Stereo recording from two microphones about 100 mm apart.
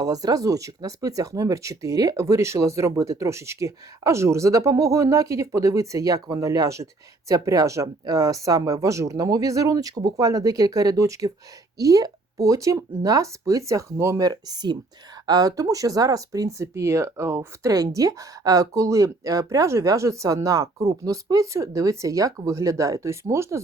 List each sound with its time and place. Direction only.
0.0 s speech: 40° right (ahead or behind)